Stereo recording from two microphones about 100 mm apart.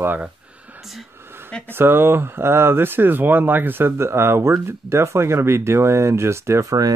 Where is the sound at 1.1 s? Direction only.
25° right (ahead or behind).